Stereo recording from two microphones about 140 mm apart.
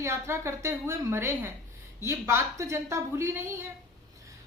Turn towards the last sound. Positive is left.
turn(degrees=-15)  # may be behind; listen again after turning